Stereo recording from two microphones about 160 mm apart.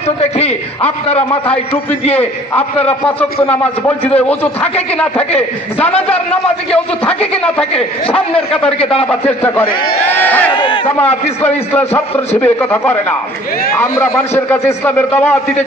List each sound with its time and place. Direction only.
0.2 s a man's voice: 40° left (ahead or behind)
4.2 s a man's voice: 10° left (ahead or behind)
7.7 s a man's voice: 35° left (ahead or behind)
10.0 s a man's voice: 10° left (ahead or behind)
10.5 s a man's voice: 30° left (ahead or behind)
11.0 s a man's voice: 10° left (ahead or behind)